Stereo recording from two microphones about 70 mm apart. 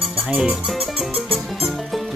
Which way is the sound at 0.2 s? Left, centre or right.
Centre.